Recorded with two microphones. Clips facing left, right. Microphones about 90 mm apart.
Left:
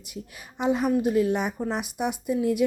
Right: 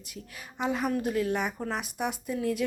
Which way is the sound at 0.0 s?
20° left (ahead or behind).